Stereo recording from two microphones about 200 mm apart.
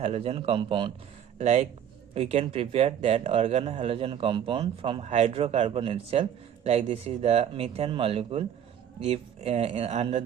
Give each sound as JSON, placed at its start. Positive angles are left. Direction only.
{"t": 0.0, "sound": "speech", "side_deg": -30}